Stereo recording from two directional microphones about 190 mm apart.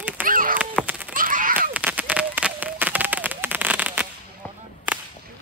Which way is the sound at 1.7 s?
5° right (ahead or behind).